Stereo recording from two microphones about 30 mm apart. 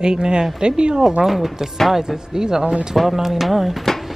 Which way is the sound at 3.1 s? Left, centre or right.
Centre.